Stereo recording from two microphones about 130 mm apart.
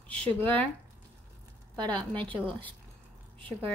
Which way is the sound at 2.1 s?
40° right (ahead or behind).